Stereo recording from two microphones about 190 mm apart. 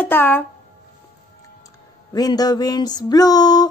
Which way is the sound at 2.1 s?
20° left (ahead or behind).